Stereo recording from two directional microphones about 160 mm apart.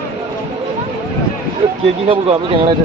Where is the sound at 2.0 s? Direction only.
35° right (ahead or behind).